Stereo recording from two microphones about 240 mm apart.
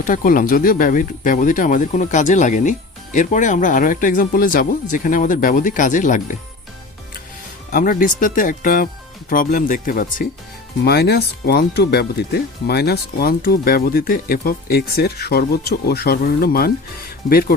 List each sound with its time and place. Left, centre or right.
0.0 s speech: left
7.7 s speech: left